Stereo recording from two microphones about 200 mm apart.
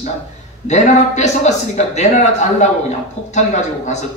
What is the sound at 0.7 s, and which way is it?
Speech, 35° left (ahead or behind).